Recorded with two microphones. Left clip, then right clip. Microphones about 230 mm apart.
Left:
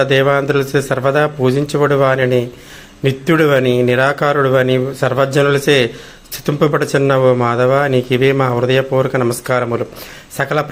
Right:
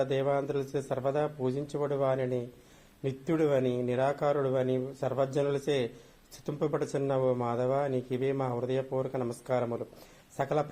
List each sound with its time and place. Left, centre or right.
0.0 s a man's voice: left